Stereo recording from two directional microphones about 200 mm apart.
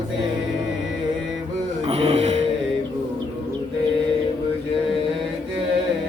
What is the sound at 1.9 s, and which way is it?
Music, 35° right (ahead or behind).